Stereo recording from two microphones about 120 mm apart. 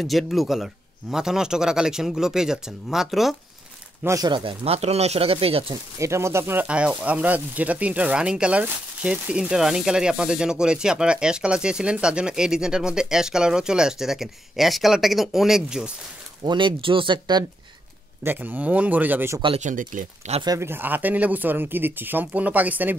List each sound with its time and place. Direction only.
0.0 s speech: centre (ahead or behind)
4.0 s speech: 25° right (ahead or behind)
4.3 s speech: 50° right (ahead or behind)
5.9 s speech: 25° right (ahead or behind); by 15.9 s 5° right (ahead or behind)
16.4 s speech: 45° right (ahead or behind)
18.2 s speech: 15° right (ahead or behind)
19.6 s speech: 90° right
20.4 s speech: 25° right (ahead or behind)